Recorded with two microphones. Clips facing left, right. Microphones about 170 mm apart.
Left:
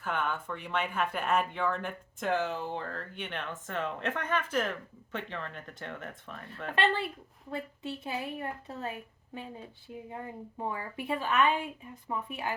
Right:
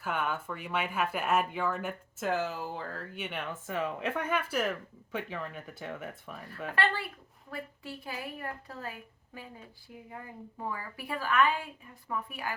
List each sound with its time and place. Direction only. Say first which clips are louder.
0.0 s speech: even; 5° right (ahead or behind)
6.7 s a woman's voice: left 3 dB; 25° left (ahead or behind)